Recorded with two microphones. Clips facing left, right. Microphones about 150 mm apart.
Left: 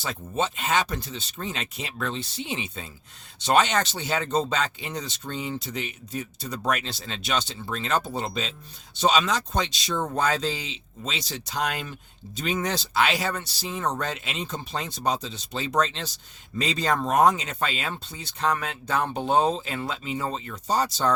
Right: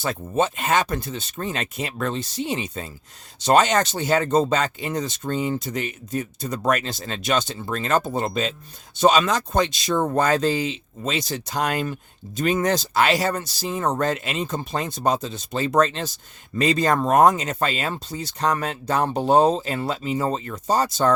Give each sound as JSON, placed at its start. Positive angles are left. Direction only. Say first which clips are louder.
{"t": 0.0, "sound": "speech", "louder": "right 5 dB", "side_deg": -50}